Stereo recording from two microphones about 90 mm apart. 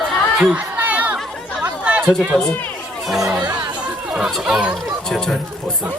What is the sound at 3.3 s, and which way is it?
Chatter, 50° right (ahead or behind).